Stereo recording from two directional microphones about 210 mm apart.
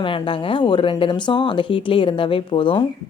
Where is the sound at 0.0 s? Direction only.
25° left (ahead or behind).